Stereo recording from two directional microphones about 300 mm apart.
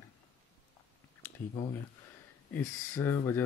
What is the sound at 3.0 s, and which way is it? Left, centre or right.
Speech, centre.